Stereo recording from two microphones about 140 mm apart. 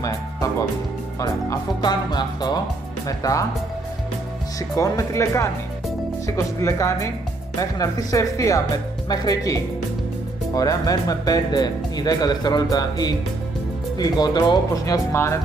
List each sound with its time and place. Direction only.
1.2 s speech: 25° left (ahead or behind)
4.7 s speech: 25° left (ahead or behind)